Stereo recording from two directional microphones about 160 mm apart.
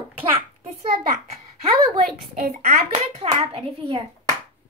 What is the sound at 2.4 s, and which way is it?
Speech, 65° right (ahead or behind).